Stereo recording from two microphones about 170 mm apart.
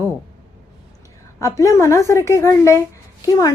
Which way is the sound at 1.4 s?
20° left (ahead or behind).